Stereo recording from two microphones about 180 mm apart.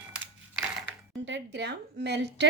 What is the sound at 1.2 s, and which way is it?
A woman's voice, 75° right (ahead or behind).